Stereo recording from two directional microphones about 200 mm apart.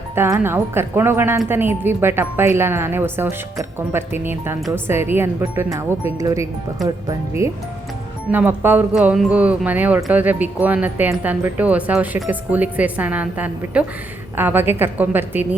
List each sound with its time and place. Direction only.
0.2 s speech: 10° right (ahead or behind)